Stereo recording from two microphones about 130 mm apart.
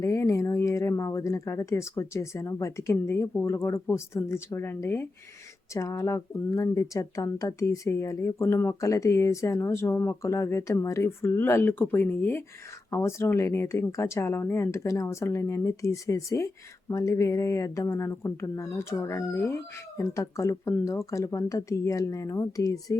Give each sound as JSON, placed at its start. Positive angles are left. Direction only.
{"t": 0.0, "sound": "speech", "side_deg": 25}